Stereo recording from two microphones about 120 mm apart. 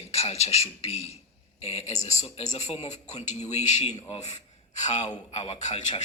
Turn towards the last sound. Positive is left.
turn(degrees=70)  # may be behind; listen again after turning